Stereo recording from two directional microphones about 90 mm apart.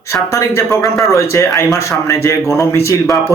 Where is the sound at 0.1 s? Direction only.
35° left (ahead or behind).